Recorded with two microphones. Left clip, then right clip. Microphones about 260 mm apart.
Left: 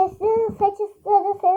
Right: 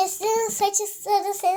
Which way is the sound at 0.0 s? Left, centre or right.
Right.